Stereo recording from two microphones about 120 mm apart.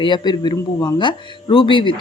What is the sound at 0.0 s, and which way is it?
Speech, 40° left (ahead or behind).